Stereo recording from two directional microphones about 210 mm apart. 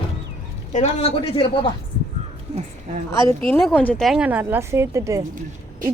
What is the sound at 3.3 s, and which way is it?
A woman's voice, 10° left (ahead or behind).